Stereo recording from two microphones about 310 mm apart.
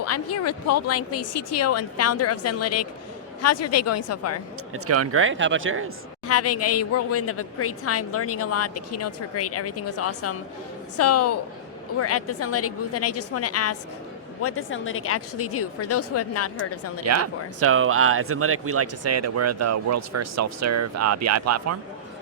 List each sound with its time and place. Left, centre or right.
0.0 s a woman's voice: left
4.7 s speech: right
6.2 s a woman's voice: left
17.1 s speech: right